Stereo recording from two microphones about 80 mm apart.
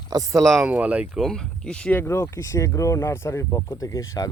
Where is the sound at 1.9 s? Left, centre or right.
Left.